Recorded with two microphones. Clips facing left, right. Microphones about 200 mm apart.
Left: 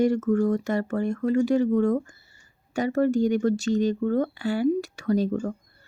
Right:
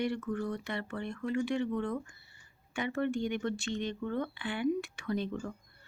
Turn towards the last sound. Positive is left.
turn(degrees=40)  # may be behind; listen again after turning